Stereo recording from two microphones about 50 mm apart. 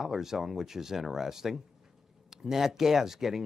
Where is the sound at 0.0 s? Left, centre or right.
Centre.